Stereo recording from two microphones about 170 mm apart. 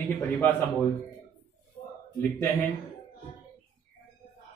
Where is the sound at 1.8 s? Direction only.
45° left (ahead or behind).